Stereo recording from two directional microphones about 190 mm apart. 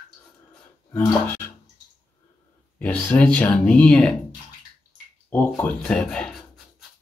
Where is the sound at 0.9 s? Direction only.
10° left (ahead or behind).